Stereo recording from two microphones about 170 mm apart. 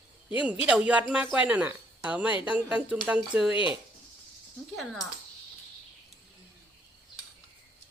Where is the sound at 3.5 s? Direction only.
30° left (ahead or behind).